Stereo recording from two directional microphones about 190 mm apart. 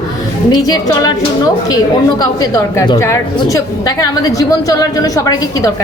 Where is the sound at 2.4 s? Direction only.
20° left (ahead or behind).